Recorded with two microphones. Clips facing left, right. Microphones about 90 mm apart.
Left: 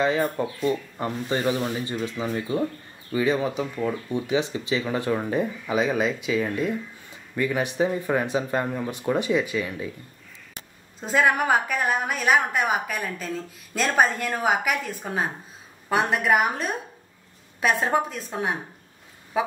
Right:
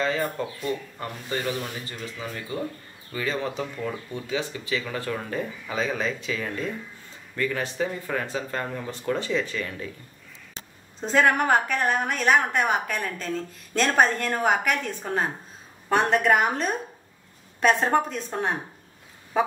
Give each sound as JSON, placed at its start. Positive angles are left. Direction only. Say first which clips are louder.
{"t": 0.0, "sound": "speech", "louder": "left 3 dB", "side_deg": 20}
{"t": 11.0, "sound": "a woman's voice", "louder": "even", "side_deg": 5}
{"t": 19.3, "sound": "a sound", "louder": "right 1 dB", "side_deg": 5}